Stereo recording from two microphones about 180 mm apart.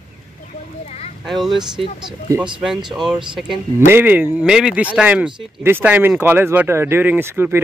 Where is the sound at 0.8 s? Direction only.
35° left (ahead or behind).